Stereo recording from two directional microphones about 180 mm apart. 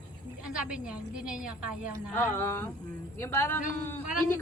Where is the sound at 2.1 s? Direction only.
15° left (ahead or behind).